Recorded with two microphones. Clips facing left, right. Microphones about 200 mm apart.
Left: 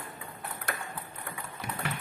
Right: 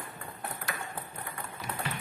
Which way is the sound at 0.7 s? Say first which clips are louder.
Left 3 dB; 55° left (ahead or behind).